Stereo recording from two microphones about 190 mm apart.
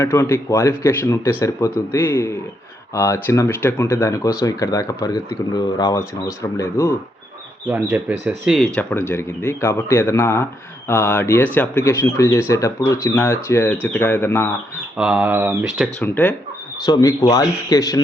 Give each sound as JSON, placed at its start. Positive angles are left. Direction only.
{"t": 0.0, "sound": "speech", "side_deg": 15}
{"t": 7.7, "sound": "speech", "side_deg": -5}
{"t": 8.5, "sound": "speech", "side_deg": 5}
{"t": 14.9, "sound": "speech", "side_deg": -5}
{"t": 16.0, "sound": "speech", "side_deg": 10}
{"t": 16.8, "sound": "speech", "side_deg": 20}